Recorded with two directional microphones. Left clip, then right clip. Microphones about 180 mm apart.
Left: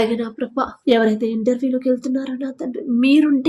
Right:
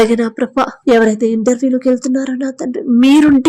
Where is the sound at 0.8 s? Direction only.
35° right (ahead or behind).